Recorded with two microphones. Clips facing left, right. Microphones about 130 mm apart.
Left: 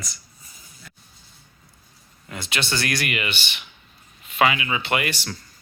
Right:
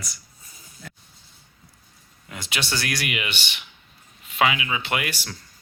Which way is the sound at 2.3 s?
10° right (ahead or behind).